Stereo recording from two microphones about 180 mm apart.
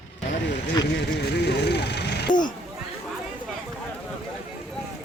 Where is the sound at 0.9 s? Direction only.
70° left (ahead or behind).